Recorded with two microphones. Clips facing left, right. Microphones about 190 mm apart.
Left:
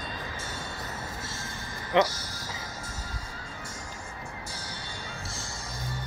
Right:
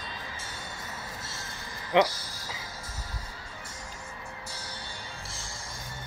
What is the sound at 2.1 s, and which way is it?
Music, 30° right (ahead or behind).